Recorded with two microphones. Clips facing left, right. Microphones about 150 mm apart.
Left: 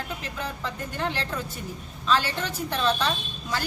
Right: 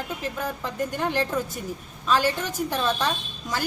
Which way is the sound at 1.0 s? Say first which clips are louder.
Right 4 dB; 10° right (ahead or behind).